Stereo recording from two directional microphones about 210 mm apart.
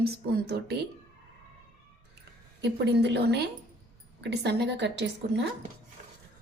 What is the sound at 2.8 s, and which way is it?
A woman's voice, 55° right (ahead or behind).